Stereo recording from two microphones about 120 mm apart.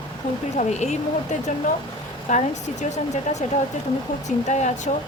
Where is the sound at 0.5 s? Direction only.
70° left (ahead or behind).